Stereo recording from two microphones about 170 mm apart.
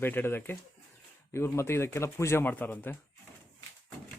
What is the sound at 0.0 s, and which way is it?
Speech, 10° left (ahead or behind).